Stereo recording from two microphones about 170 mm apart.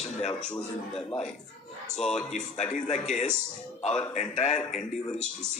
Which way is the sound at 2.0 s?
5° left (ahead or behind).